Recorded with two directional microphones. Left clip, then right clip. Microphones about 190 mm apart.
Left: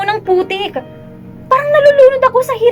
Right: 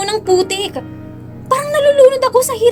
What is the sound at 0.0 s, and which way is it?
A woman's voice, 60° right (ahead or behind).